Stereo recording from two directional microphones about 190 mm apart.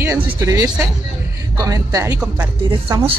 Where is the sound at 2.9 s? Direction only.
25° right (ahead or behind).